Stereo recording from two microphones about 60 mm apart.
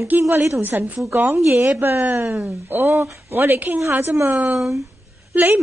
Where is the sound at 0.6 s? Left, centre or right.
Right.